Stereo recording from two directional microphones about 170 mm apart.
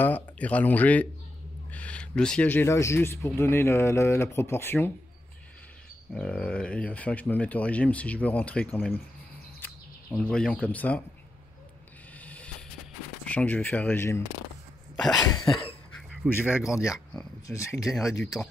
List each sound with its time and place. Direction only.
0.0 s speech: 10° left (ahead or behind)
6.1 s speech: 5° left (ahead or behind)
10.1 s speech: 5° left (ahead or behind)
12.2 s vehicle: 10° left (ahead or behind)
13.2 s speech: 10° left (ahead or behind)
16.4 s speech: 5° right (ahead or behind)
17.5 s speech: 20° left (ahead or behind)
17.8 s speech: centre (ahead or behind)